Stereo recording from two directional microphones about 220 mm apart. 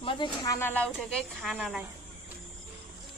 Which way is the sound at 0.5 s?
10° left (ahead or behind).